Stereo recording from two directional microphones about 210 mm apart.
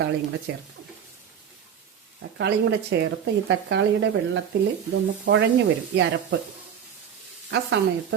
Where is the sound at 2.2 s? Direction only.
55° right (ahead or behind).